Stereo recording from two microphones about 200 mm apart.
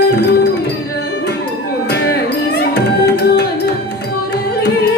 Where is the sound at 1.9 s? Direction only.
55° left (ahead or behind).